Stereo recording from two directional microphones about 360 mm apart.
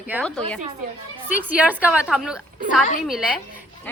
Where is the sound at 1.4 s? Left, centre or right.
Centre.